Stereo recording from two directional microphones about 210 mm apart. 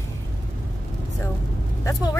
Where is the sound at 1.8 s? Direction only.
15° left (ahead or behind).